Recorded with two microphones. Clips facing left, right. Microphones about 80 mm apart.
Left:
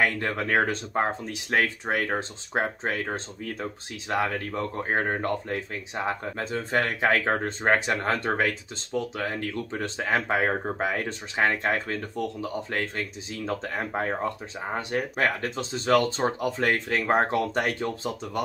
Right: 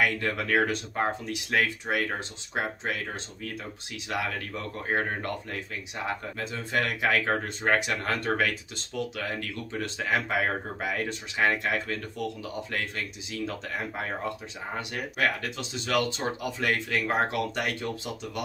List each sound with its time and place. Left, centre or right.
0.0 s speech: left